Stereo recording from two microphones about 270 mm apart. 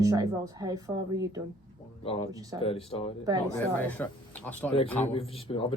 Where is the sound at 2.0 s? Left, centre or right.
Left.